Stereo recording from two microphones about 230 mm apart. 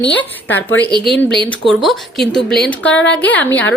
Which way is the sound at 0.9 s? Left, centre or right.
Right.